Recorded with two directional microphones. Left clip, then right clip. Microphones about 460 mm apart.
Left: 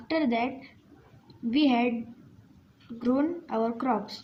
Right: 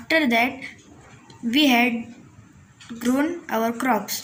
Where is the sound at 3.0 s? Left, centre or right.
Left.